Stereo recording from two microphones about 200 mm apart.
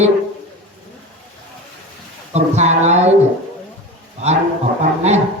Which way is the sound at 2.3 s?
35° right (ahead or behind).